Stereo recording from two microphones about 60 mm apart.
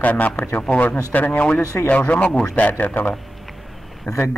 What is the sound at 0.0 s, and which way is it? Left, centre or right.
Speech, left.